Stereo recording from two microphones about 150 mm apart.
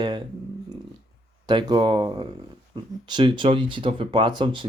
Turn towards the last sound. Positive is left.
turn(degrees=-30)  # may be behind; listen again after turning